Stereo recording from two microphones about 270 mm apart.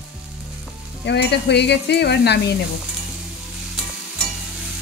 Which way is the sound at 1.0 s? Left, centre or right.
Left.